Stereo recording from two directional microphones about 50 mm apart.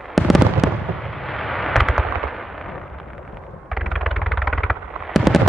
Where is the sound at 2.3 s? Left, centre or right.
Centre.